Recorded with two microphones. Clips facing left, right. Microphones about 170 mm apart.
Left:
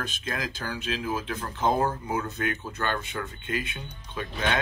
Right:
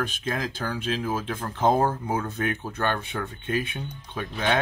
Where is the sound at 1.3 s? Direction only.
50° right (ahead or behind).